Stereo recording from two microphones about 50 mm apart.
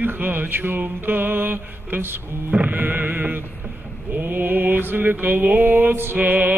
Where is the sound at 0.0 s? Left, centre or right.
Right.